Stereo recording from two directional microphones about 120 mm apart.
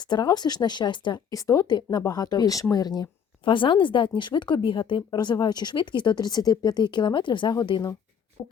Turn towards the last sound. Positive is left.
turn(degrees=35)  # may be behind; listen again after turning